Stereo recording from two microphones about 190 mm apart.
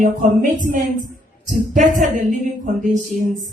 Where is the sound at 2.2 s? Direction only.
40° right (ahead or behind).